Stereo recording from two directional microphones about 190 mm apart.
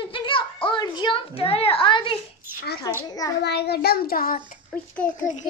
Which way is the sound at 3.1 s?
20° left (ahead or behind).